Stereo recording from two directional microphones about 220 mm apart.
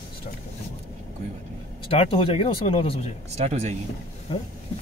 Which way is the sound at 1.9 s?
25° left (ahead or behind).